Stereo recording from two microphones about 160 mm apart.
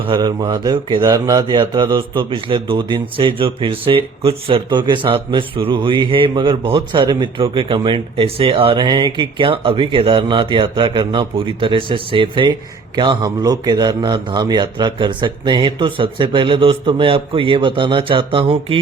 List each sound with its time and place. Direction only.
0.0 s speech: 25° right (ahead or behind)